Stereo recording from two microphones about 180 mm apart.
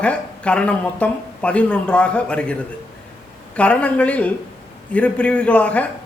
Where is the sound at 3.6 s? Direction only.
5° left (ahead or behind).